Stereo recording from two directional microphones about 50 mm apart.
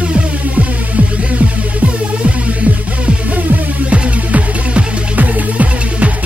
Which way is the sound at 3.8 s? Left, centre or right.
Right.